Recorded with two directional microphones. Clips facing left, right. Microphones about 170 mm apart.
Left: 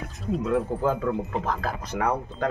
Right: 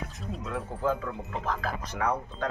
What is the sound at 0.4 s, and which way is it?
Speech, 55° left (ahead or behind).